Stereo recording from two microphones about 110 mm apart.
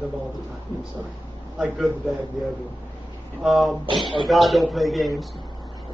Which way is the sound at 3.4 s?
Centre (ahead or behind).